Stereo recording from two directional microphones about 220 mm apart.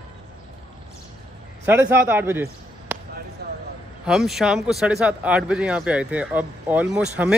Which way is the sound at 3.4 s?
45° right (ahead or behind).